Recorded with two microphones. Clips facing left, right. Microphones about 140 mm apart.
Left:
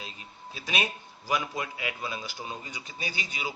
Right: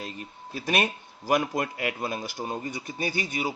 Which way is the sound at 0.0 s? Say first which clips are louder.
Right 6 dB; 55° right (ahead or behind).